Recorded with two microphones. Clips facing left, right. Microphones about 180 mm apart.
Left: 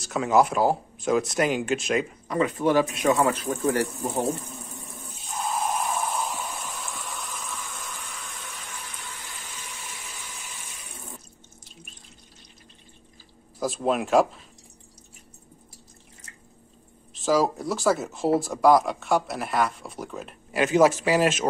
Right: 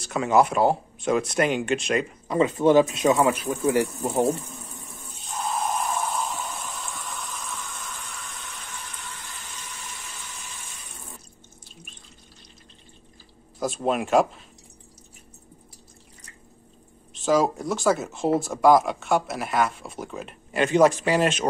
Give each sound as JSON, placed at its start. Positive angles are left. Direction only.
{"t": 0.0, "sound": "speech", "side_deg": 0}
{"t": 2.2, "sound": "speech", "side_deg": -25}
{"t": 5.4, "sound": "a sound", "side_deg": 5}
{"t": 13.6, "sound": "speech", "side_deg": 0}
{"t": 17.1, "sound": "speech", "side_deg": 0}